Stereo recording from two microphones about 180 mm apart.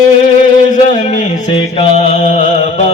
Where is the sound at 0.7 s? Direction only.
45° left (ahead or behind).